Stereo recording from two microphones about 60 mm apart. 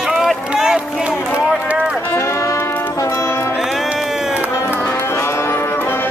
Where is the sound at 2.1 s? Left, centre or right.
Left.